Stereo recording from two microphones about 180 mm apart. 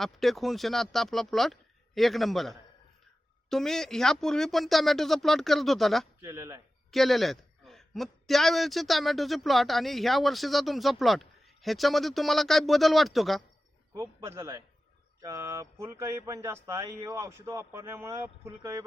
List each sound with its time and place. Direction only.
0.0 s a man's voice: centre (ahead or behind)
6.2 s speech: 15° right (ahead or behind)
6.9 s a man's voice: centre (ahead or behind)
13.9 s speech: 15° right (ahead or behind)